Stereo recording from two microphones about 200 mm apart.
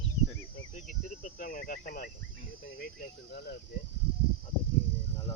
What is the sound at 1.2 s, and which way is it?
Speech, 45° left (ahead or behind).